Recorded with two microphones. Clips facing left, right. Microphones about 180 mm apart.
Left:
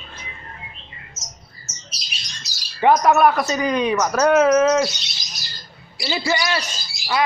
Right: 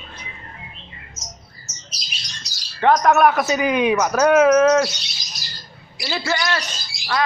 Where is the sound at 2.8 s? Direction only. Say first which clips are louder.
Even; 5° left (ahead or behind).